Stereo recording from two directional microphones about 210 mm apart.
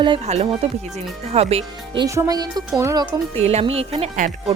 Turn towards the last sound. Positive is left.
turn(degrees=-35)  # may be behind; listen again after turning